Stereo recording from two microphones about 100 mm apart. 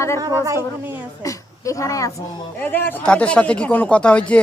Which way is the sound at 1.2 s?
35° left (ahead or behind).